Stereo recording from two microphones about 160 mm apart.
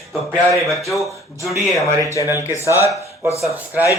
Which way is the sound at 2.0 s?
20° left (ahead or behind).